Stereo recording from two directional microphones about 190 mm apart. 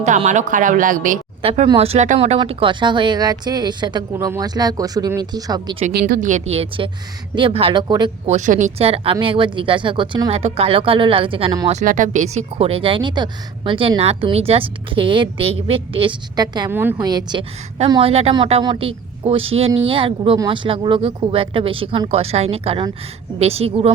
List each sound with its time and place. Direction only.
0.0 s speech: 40° right (ahead or behind)
1.4 s speech: 30° right (ahead or behind)
5.9 s a woman's voice: 55° right (ahead or behind); by 8.4 s 25° right (ahead or behind)
8.4 s a woman's voice: 40° right (ahead or behind); by 11.7 s 25° right (ahead or behind)
11.7 s a woman's voice: 40° right (ahead or behind)